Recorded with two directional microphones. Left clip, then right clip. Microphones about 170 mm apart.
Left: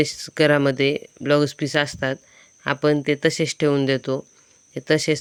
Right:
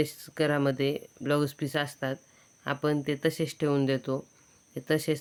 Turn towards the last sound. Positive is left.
turn(degrees=30)  # may be behind; listen again after turning